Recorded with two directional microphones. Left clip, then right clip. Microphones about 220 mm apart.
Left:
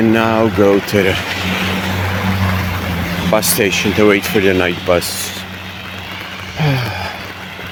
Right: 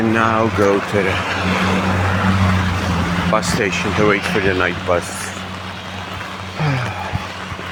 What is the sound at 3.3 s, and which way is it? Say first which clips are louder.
Speech: left 5 dB; 45° left (ahead or behind).